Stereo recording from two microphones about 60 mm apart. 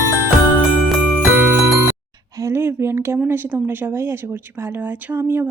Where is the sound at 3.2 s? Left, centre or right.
Right.